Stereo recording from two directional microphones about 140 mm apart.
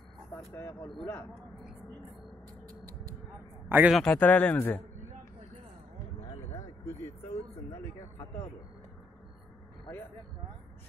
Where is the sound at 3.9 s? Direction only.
10° left (ahead or behind).